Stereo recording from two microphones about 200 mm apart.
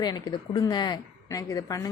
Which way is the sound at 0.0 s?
20° left (ahead or behind).